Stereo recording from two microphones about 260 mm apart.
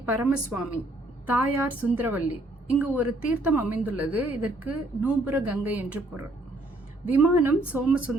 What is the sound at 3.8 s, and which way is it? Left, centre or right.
A woman's voice, centre.